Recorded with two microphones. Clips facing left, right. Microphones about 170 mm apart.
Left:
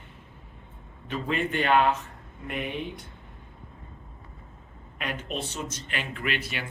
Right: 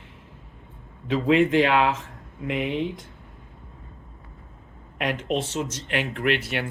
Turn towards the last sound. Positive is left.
turn(degrees=-65)  # may be behind; listen again after turning